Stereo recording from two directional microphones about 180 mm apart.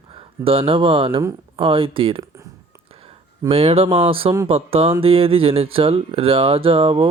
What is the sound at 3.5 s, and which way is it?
Speech, 35° right (ahead or behind).